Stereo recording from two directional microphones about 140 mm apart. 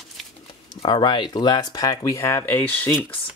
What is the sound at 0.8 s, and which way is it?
Speech, 35° left (ahead or behind).